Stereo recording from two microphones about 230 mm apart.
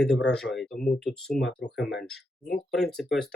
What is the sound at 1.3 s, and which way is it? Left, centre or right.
Speech, left.